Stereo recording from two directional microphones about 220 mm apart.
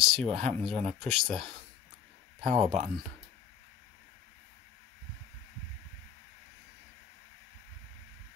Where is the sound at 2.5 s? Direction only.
30° right (ahead or behind).